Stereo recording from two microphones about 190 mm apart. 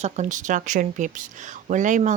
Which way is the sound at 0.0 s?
40° right (ahead or behind).